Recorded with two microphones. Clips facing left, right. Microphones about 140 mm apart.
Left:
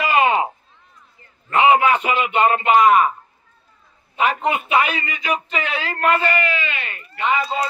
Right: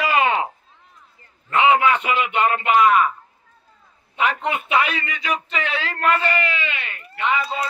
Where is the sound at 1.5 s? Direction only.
15° left (ahead or behind).